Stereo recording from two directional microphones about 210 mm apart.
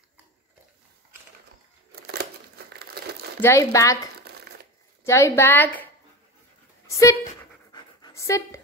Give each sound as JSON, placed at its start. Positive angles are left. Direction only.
{"t": 2.7, "sound": "crumpling", "side_deg": -50}
{"t": 3.3, "sound": "a woman's voice", "side_deg": 15}
{"t": 5.0, "sound": "a woman's voice", "side_deg": 15}
{"t": 6.9, "sound": "speech", "side_deg": 15}
{"t": 7.7, "sound": "pant", "side_deg": 15}